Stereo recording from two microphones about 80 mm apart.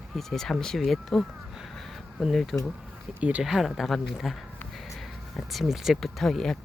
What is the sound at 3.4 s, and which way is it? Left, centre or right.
Speech, centre.